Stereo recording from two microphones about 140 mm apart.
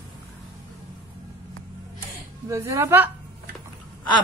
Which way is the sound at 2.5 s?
20° right (ahead or behind).